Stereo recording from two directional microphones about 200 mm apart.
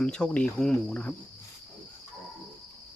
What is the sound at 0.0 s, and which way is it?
Speech, 5° left (ahead or behind).